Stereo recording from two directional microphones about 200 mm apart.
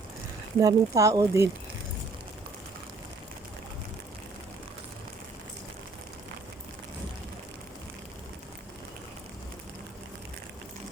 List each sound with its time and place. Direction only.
0.6 s speech: 15° right (ahead or behind)